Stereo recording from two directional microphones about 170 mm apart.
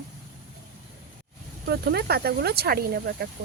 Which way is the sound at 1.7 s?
70° right (ahead or behind).